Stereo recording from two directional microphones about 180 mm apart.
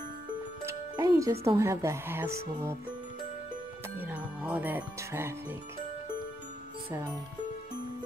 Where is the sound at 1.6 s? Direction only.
15° right (ahead or behind).